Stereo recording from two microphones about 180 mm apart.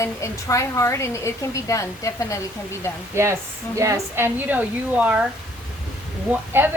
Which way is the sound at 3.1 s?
15° right (ahead or behind).